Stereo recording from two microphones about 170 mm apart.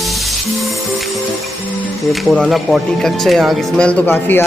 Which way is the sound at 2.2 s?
Centre (ahead or behind).